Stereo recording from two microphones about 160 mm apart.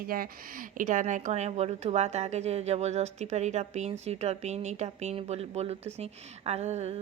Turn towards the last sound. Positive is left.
turn(degrees=-40)  # may be behind; listen again after turning